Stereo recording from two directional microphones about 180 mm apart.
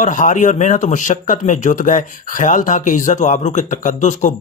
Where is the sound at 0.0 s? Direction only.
45° left (ahead or behind).